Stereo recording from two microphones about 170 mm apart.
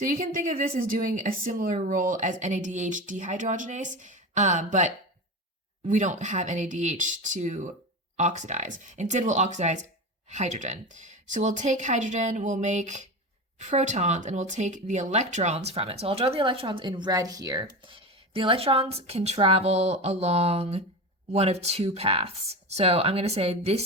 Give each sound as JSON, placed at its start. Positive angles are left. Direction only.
{"t": 0.0, "sound": "speech", "side_deg": -55}
{"t": 5.9, "sound": "speech", "side_deg": -45}